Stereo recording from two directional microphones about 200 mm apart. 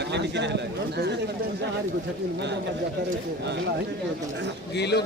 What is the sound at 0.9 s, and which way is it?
Speech, 55° right (ahead or behind).